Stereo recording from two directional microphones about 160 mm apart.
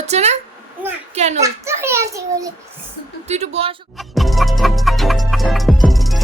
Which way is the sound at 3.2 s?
40° right (ahead or behind).